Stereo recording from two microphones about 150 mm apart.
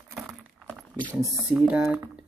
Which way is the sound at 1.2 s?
5° right (ahead or behind).